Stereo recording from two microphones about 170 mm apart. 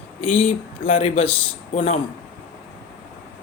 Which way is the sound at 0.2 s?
35° left (ahead or behind).